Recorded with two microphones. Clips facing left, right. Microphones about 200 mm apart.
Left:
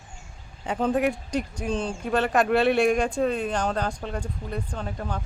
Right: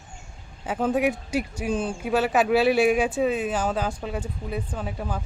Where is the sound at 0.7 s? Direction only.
5° right (ahead or behind).